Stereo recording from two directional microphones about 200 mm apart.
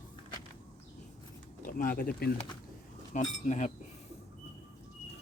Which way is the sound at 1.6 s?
45° left (ahead or behind).